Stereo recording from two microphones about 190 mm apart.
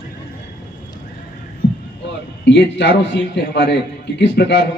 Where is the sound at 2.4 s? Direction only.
65° left (ahead or behind).